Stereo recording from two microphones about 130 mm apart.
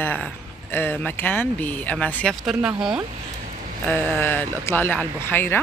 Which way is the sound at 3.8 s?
15° left (ahead or behind).